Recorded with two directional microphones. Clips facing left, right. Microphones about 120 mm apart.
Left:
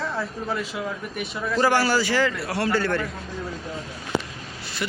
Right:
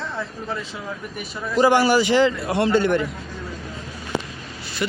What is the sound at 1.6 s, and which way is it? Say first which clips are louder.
A man's voice: right 5 dB; 15° right (ahead or behind).